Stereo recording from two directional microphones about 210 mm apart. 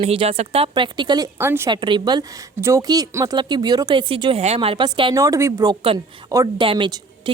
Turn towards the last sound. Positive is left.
turn(degrees=-20)  # may be behind; listen again after turning